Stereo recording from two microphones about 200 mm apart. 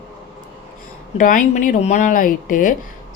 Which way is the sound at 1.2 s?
40° left (ahead or behind).